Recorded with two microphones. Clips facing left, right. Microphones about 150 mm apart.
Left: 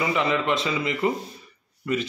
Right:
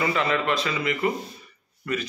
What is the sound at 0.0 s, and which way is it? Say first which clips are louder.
A man's voice: left 1 dB; 20° left (ahead or behind).